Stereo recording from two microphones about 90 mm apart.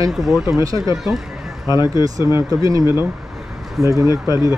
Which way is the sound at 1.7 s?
50° left (ahead or behind).